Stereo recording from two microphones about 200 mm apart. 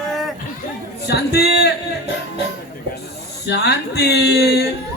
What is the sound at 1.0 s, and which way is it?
Speech, 55° left (ahead or behind).